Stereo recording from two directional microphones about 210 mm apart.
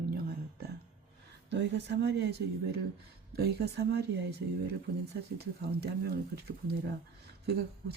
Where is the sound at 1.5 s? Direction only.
55° right (ahead or behind).